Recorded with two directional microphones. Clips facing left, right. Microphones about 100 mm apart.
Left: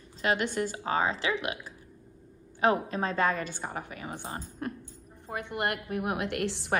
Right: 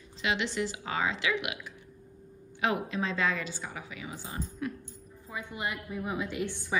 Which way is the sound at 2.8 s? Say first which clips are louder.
Left 3 dB; 45° left (ahead or behind).